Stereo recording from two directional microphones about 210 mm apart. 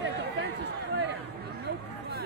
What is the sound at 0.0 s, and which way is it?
Chatter, 55° right (ahead or behind).